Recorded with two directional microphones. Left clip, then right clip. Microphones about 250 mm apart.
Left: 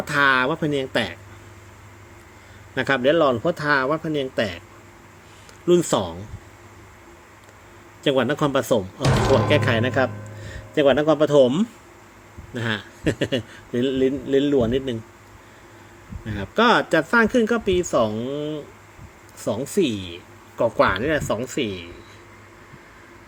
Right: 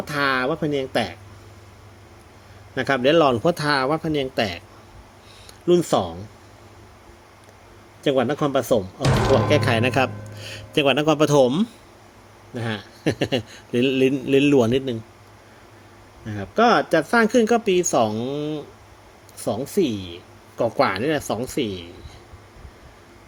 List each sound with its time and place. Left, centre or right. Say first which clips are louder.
0.1 s speech: left 3 dB; centre
2.7 s speech: right 1 dB; centre
5.6 s speech: even; centre
8.0 s speech: even; centre
12.5 s a man's voice: left 3 dB; centre
13.1 s speech: right 1 dB; centre
16.2 s speech: even; centre
19.5 s speech: even; centre